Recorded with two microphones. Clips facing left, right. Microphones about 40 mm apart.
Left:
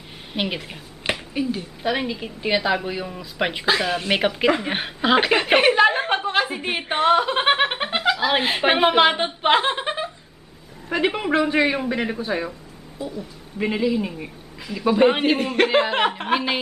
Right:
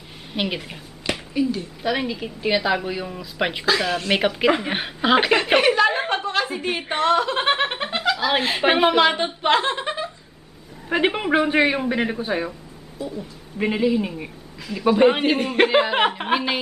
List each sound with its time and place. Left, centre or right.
0.3 s a woman's voice: centre
1.1 s a sound: left
1.8 s a woman's voice: centre
6.0 s a sound: centre
6.4 s a woman's voice: centre
10.9 s a man's voice: centre
11.7 s a woman's voice: centre
13.6 s a woman's voice: centre